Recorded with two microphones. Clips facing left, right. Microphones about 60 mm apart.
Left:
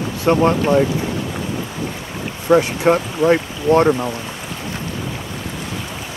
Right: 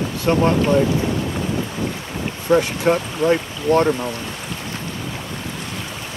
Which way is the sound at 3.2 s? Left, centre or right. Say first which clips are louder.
Left 3 dB; centre.